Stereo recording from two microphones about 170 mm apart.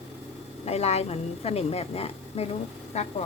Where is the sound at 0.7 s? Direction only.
40° left (ahead or behind).